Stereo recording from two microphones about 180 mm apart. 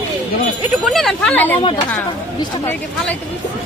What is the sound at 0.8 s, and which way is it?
Speech, centre (ahead or behind).